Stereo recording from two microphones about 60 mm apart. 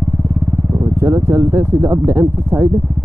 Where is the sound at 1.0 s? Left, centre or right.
Right.